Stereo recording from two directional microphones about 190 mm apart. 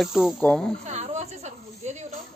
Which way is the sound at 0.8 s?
35° right (ahead or behind).